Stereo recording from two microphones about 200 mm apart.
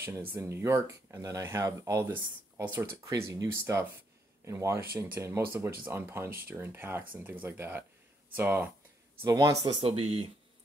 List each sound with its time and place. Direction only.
0.0 s speech: 10° right (ahead or behind); by 10.2 s 30° right (ahead or behind)